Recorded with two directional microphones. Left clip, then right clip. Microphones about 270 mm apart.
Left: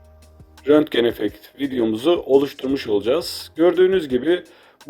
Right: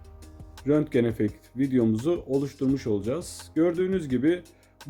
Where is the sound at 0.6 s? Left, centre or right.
Centre.